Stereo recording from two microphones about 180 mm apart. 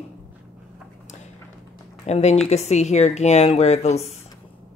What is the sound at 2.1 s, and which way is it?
Speech, 40° left (ahead or behind).